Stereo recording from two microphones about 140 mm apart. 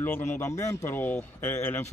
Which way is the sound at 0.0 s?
15° left (ahead or behind).